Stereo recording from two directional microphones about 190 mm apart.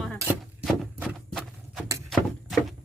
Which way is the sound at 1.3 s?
Centre (ahead or behind).